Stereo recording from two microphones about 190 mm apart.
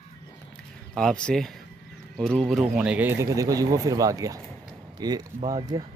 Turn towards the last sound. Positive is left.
turn(degrees=-20)  # may be behind; listen again after turning